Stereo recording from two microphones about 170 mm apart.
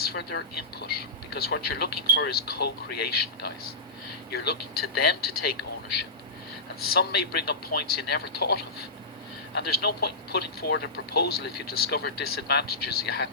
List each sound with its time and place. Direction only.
0.0 s speech: 70° left (ahead or behind)
6.7 s speech: 65° left (ahead or behind)